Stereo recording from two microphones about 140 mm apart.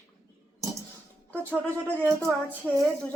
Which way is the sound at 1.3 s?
10° left (ahead or behind).